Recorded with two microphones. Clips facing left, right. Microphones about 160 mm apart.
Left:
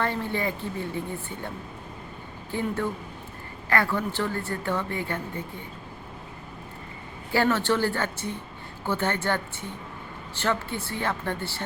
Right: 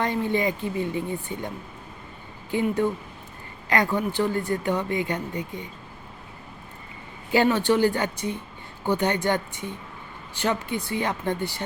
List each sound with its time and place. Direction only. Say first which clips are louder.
0.0 s speech: right 4 dB; 15° right (ahead or behind)
7.3 s speech: right 3 dB; 15° right (ahead or behind)